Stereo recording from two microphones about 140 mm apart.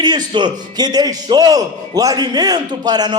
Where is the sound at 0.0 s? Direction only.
30° right (ahead or behind).